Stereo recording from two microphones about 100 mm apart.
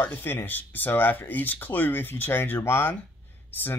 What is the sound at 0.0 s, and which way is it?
Speech, 20° left (ahead or behind).